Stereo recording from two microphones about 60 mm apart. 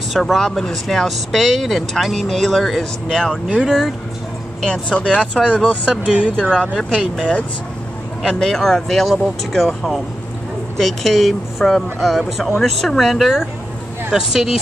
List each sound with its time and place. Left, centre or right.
0.1 s speech: centre
3.4 s speech: centre
4.6 s speech: centre
6.0 s speech: centre
6.5 s speech: centre
6.8 s speech: centre